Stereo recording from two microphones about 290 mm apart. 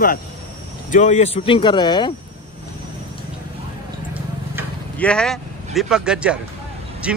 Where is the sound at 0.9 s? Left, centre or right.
Left.